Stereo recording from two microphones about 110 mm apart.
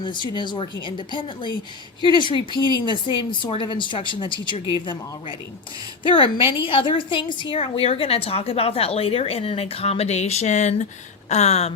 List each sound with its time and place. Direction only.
0.0 s a woman's voice: 45° left (ahead or behind)
6.0 s a woman's voice: 50° left (ahead or behind); by 11.7 s 75° left (ahead or behind)